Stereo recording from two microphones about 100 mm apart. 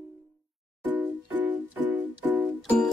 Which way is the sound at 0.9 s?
15° right (ahead or behind).